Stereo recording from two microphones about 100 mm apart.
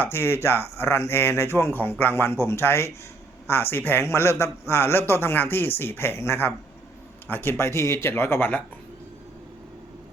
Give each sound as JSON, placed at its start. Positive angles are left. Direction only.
{"t": 0.0, "sound": "a man's voice", "side_deg": 25}